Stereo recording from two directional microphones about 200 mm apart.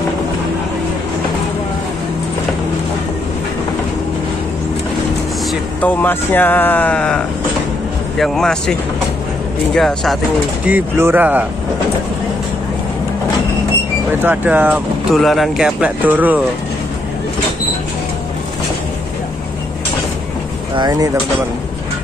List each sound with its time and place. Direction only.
5.5 s speech: 10° left (ahead or behind)
9.8 s speech: centre (ahead or behind)
10.6 s speech: 10° right (ahead or behind)
14.2 s speech: 10° right (ahead or behind)
20.7 s speech: 20° right (ahead or behind)